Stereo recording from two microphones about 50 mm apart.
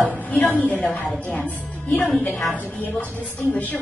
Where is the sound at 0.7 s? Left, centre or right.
Centre.